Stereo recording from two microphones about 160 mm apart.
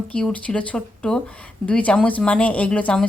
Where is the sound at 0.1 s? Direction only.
5° left (ahead or behind).